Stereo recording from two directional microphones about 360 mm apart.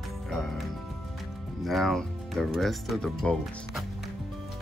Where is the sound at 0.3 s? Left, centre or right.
Centre.